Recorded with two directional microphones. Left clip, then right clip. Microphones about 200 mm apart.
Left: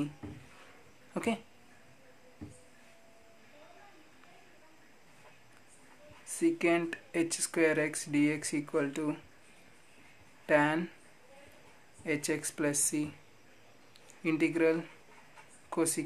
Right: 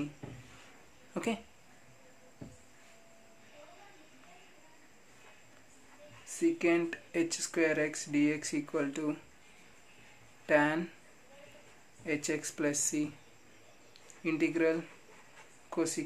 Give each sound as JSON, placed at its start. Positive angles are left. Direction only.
{"t": 1.1, "sound": "speech", "side_deg": 15}
{"t": 6.2, "sound": "speech", "side_deg": 20}
{"t": 10.4, "sound": "speech", "side_deg": 15}
{"t": 12.0, "sound": "speech", "side_deg": 20}
{"t": 14.2, "sound": "speech", "side_deg": 20}